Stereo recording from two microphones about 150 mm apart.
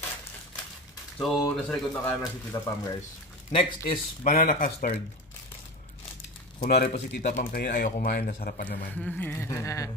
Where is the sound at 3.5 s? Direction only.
65° left (ahead or behind).